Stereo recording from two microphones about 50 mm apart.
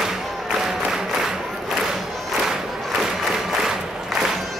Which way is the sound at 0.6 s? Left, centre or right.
Centre.